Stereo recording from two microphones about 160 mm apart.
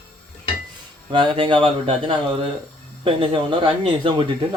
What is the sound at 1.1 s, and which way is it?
Speech, 30° right (ahead or behind).